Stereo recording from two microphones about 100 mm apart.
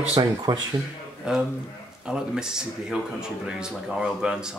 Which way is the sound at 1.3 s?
5° right (ahead or behind).